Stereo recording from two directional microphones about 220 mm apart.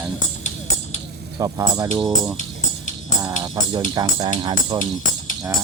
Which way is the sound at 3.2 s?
20° right (ahead or behind).